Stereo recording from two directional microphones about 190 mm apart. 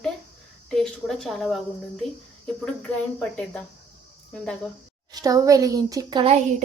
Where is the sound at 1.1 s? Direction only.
Centre (ahead or behind).